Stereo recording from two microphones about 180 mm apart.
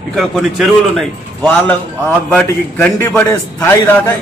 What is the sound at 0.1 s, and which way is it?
Speech, centre (ahead or behind).